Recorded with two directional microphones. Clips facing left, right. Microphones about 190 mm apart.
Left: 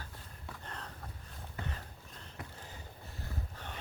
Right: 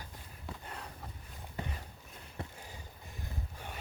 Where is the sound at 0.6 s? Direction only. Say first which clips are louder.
Right 1 dB; 10° right (ahead or behind).